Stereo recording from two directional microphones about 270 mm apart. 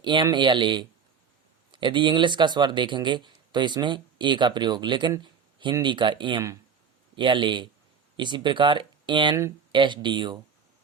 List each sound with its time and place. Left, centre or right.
0.0 s speech: centre